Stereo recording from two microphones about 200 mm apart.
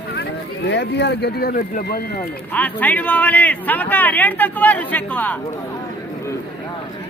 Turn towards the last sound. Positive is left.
turn(degrees=10)  # may be behind; listen again after turning